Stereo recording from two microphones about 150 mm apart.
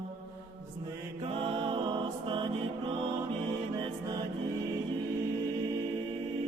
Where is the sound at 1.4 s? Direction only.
35° right (ahead or behind).